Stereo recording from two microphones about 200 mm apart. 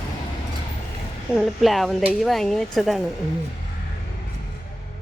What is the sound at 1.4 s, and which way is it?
Speech, centre (ahead or behind).